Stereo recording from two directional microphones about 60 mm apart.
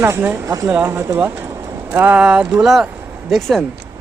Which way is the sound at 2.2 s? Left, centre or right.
Centre.